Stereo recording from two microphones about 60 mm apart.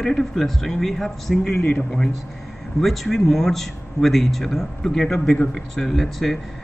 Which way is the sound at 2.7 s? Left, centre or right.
Centre.